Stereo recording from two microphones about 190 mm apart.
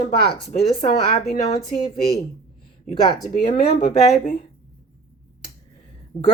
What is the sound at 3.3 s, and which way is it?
A woman's voice, 40° left (ahead or behind).